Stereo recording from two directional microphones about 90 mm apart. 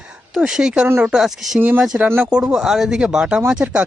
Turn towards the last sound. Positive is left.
turn(degrees=-10)  # may be behind; listen again after turning